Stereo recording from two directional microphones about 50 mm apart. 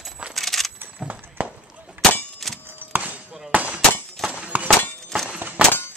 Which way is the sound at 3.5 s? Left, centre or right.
Right.